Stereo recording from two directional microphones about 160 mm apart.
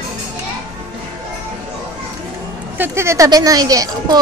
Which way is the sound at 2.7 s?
15° right (ahead or behind).